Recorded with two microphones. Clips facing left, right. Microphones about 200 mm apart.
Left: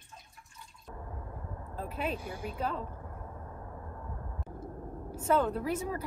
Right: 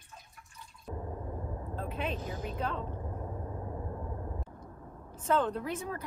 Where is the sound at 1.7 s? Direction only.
5° left (ahead or behind).